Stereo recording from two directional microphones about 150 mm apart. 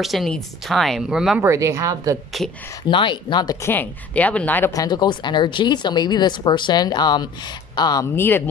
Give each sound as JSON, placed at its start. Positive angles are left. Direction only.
{"t": 0.0, "sound": "speech", "side_deg": 0}
{"t": 1.4, "sound": "speech", "side_deg": -20}
{"t": 2.9, "sound": "speech", "side_deg": 30}
{"t": 3.6, "sound": "a woman's voice", "side_deg": 10}
{"t": 4.7, "sound": "speech", "side_deg": 25}
{"t": 8.2, "sound": "a woman's voice", "side_deg": 15}